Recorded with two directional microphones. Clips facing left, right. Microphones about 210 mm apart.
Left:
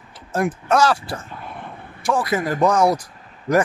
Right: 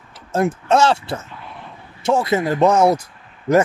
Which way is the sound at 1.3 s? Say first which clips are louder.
Left 2 dB; 50° left (ahead or behind).